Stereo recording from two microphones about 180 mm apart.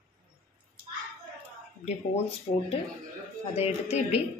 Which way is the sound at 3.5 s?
35° left (ahead or behind).